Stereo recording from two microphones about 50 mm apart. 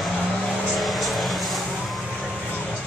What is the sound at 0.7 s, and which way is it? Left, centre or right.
Vehicle, centre.